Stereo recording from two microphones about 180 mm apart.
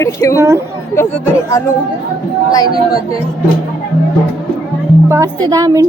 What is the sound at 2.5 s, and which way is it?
Speech, 20° left (ahead or behind).